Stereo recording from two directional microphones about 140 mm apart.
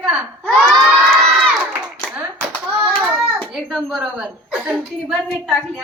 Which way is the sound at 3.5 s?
5° right (ahead or behind).